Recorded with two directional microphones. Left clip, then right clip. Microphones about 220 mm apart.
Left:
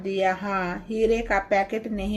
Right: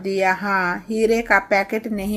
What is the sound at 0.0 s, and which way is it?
Speech, 20° right (ahead or behind).